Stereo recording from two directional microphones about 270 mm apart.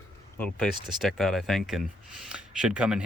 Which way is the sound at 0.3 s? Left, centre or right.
Centre.